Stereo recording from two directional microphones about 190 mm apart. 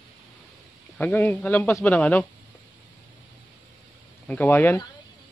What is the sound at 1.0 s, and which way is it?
A man's voice, 10° left (ahead or behind).